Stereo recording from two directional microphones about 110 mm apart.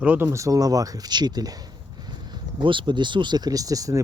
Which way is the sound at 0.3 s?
30° right (ahead or behind).